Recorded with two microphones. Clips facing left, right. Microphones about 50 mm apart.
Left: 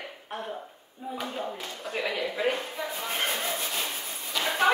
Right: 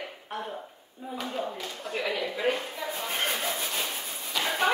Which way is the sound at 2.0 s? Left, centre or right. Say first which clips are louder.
Even; left.